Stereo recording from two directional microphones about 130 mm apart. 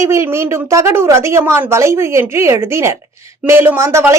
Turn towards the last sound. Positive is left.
turn(degrees=-20)  # may be behind; listen again after turning